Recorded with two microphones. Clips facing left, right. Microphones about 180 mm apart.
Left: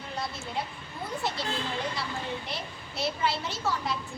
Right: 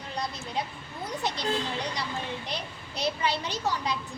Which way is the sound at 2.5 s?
15° right (ahead or behind).